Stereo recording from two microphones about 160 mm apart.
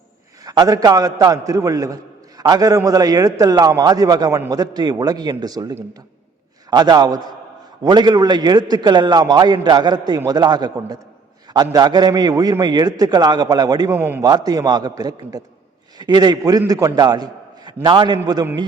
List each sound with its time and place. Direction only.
0.4 s a man's voice: 25° right (ahead or behind)